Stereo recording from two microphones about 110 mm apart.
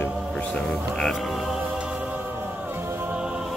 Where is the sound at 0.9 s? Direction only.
Centre (ahead or behind).